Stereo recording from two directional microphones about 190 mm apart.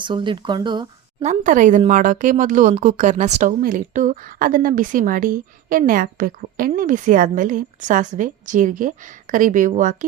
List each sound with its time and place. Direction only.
0.0 s speech: 25° right (ahead or behind)
1.2 s a woman's voice: 40° right (ahead or behind)